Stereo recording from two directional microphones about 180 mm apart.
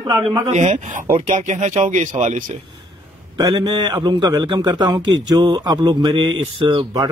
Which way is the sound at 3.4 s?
25° right (ahead or behind).